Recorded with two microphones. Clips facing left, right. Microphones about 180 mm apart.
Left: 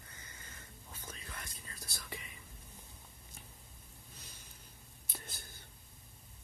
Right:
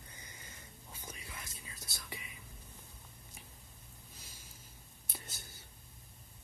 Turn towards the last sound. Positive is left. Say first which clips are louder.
# left 1 dB
turn(degrees=0)  # may be behind; listen again after turning